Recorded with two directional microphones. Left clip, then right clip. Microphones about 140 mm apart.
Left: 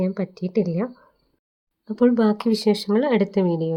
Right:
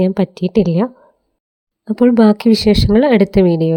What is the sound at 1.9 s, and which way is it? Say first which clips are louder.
Speech: right 7 dB; 50° right (ahead or behind).